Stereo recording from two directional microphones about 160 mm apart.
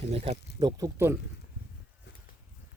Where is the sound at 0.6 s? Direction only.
25° right (ahead or behind).